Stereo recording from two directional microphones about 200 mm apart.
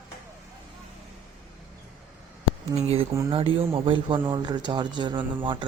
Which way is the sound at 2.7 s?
30° right (ahead or behind).